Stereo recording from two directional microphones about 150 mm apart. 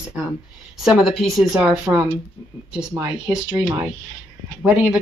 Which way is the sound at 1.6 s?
10° right (ahead or behind).